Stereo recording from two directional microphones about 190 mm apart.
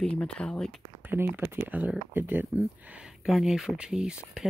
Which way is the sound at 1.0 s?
10° right (ahead or behind).